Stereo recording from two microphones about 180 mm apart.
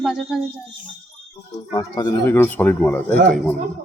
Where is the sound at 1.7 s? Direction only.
25° left (ahead or behind); by 3.5 s 5° left (ahead or behind).